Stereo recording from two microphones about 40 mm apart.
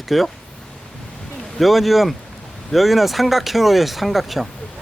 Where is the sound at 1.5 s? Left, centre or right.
Centre.